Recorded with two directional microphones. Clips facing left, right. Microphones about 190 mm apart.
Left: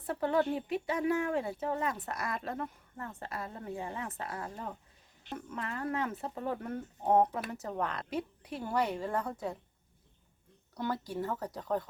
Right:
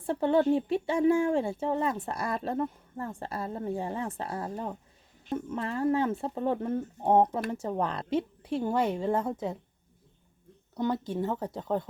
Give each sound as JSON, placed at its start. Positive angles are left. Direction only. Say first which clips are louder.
{"t": 0.0, "sound": "speech", "louder": "right 5 dB", "side_deg": -30}
{"t": 10.8, "sound": "speech", "louder": "right 6 dB", "side_deg": -20}